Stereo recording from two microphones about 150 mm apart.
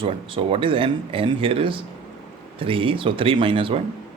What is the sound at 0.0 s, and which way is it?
Speech, 35° right (ahead or behind).